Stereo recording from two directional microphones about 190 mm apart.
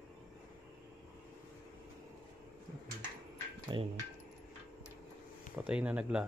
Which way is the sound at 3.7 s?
25° right (ahead or behind).